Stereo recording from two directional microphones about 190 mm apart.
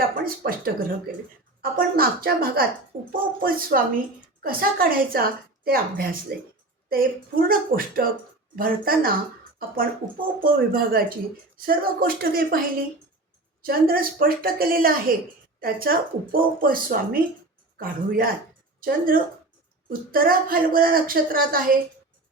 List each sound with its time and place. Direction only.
0.3 s speech: 55° right (ahead or behind)
1.7 s a woman's voice: 50° right (ahead or behind)